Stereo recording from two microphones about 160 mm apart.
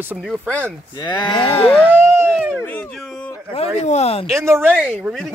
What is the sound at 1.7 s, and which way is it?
Speech, 10° left (ahead or behind).